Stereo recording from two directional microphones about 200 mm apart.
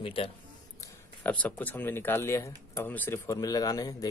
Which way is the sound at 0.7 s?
10° left (ahead or behind).